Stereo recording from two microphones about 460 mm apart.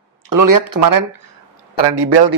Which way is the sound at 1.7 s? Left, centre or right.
Right.